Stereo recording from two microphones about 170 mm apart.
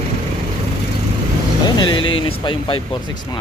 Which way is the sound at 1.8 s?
30° left (ahead or behind).